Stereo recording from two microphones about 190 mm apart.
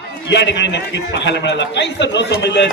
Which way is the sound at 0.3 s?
65° left (ahead or behind).